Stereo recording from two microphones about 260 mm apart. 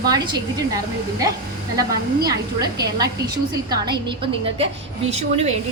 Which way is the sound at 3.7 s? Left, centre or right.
Centre.